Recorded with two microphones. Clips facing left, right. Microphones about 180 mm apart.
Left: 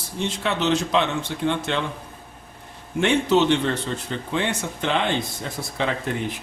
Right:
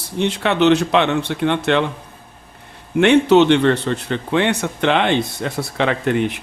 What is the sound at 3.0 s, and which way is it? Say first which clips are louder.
Speech: right 7 dB; 70° right (ahead or behind).